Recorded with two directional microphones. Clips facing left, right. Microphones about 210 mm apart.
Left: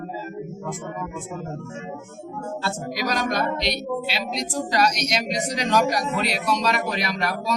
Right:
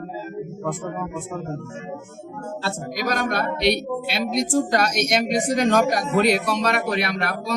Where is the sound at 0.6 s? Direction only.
60° right (ahead or behind).